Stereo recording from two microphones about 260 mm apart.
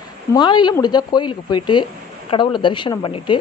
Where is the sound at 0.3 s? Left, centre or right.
Centre.